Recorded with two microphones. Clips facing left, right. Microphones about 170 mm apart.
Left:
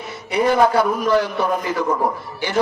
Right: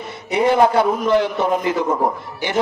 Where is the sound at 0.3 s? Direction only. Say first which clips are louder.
Right 1 dB; 25° right (ahead or behind).